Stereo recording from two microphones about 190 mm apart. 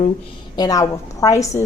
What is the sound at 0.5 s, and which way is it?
A woman's voice, 20° left (ahead or behind).